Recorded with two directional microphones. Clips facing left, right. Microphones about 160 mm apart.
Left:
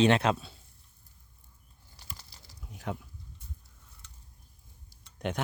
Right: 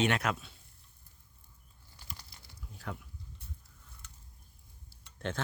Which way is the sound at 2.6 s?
20° left (ahead or behind).